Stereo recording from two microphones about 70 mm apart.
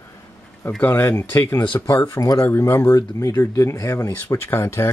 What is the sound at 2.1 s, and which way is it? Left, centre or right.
Speech, left.